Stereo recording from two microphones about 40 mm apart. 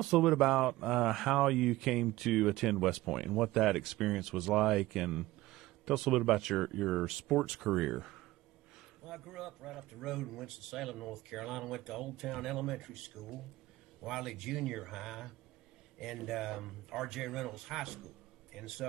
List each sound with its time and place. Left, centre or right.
0.0 s a man's voice: centre